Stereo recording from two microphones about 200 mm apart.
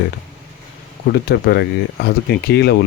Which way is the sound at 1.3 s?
55° left (ahead or behind).